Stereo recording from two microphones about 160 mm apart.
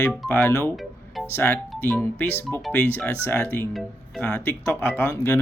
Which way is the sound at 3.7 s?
Centre (ahead or behind).